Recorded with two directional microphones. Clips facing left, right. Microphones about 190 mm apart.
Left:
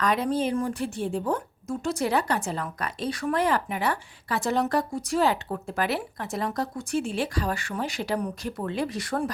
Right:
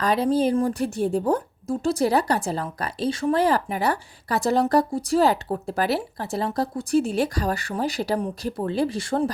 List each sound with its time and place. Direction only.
0.0 s a woman's voice: 30° right (ahead or behind)